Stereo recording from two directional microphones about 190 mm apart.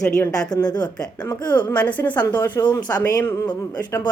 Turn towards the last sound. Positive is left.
turn(degrees=10)  # may be behind; listen again after turning